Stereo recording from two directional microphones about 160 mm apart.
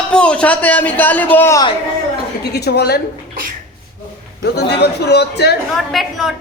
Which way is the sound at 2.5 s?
90° left.